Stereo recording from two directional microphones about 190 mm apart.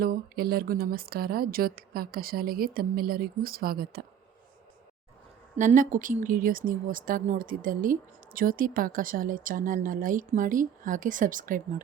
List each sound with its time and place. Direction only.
0.0 s speech: 50° right (ahead or behind)
5.5 s speech: 40° right (ahead or behind)